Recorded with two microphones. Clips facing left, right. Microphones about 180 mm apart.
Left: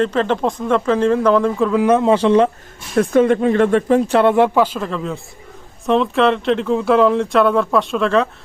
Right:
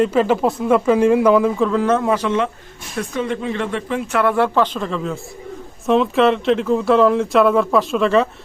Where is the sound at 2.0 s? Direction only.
30° left (ahead or behind).